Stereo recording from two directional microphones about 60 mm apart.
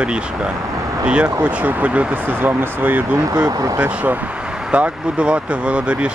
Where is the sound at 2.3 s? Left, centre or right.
Right.